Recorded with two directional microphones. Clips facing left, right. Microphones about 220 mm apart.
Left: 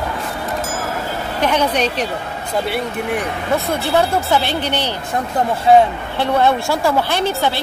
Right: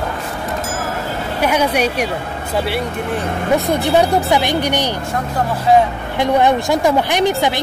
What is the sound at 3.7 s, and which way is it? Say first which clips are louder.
Speech: right 2 dB; 15° right (ahead or behind).